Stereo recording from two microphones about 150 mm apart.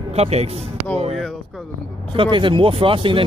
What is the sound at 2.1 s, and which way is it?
Speech, 35° right (ahead or behind).